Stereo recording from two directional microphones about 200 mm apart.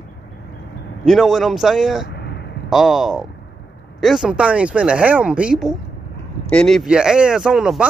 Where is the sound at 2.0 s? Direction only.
55° left (ahead or behind).